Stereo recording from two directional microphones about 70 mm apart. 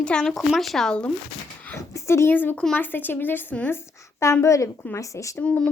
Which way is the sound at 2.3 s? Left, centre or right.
Left.